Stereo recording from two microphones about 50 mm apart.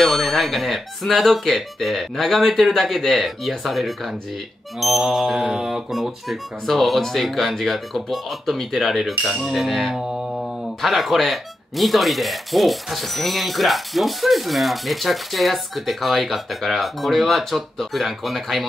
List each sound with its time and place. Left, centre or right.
0.0 s speech: centre
4.7 s music: centre
5.9 s speech: centre